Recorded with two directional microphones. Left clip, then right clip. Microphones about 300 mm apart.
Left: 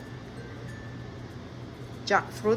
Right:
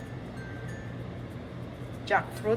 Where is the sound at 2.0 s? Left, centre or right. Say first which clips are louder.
Left 2 dB; centre.